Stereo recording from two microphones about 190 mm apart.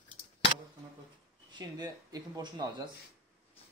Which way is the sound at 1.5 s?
20° right (ahead or behind).